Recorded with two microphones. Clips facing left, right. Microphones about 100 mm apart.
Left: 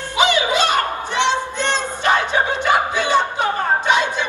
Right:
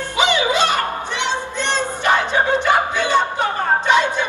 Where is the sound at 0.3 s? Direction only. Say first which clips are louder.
Even; 15° left (ahead or behind).